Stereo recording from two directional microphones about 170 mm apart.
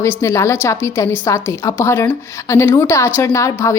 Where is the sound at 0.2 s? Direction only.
15° left (ahead or behind).